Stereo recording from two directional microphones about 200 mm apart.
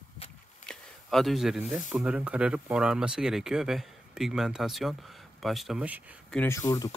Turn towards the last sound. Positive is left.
turn(degrees=15)  # may be behind; listen again after turning